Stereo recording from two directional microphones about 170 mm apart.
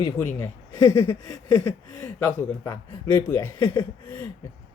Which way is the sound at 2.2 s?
15° left (ahead or behind).